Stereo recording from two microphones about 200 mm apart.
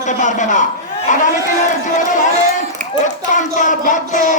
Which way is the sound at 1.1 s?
40° left (ahead or behind).